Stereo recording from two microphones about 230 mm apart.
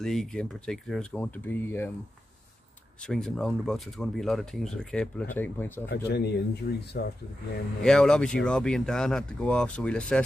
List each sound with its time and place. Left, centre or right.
0.0 s speech: centre
3.0 s speech: centre
5.9 s speech: left
7.8 s speech: centre